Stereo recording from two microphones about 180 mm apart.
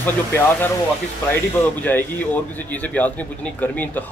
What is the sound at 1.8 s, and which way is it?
Speech, 10° left (ahead or behind).